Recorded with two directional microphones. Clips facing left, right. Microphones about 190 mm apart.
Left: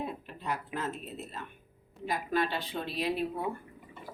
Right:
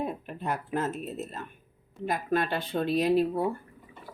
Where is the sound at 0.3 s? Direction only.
50° right (ahead or behind).